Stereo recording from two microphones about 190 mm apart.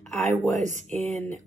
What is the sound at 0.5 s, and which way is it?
Speech, 40° right (ahead or behind).